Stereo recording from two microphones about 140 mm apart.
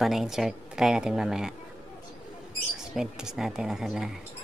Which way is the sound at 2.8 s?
5° right (ahead or behind).